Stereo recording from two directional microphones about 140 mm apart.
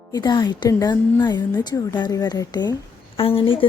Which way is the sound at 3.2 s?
40° left (ahead or behind).